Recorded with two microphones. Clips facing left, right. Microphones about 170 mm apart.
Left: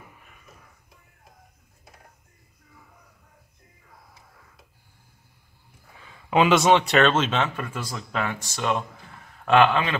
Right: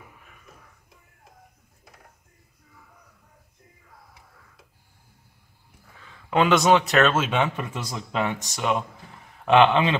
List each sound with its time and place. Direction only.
6.0 s a man's voice: 5° left (ahead or behind); by 9.9 s 20° right (ahead or behind)